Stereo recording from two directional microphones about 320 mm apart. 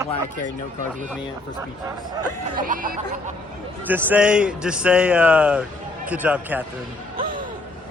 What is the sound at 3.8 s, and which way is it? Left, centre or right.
A man's voice, centre.